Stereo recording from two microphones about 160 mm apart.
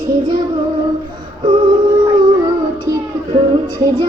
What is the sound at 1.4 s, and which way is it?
Female singing, 30° right (ahead or behind).